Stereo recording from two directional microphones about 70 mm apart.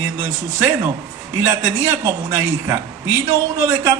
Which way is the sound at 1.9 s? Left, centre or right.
Right.